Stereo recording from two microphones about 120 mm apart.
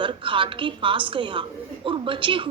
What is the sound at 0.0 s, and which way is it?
A woman's voice, 45° right (ahead or behind).